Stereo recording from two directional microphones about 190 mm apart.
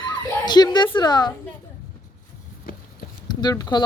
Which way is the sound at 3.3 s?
20° left (ahead or behind).